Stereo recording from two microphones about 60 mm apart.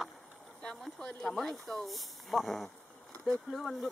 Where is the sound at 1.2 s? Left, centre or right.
Centre.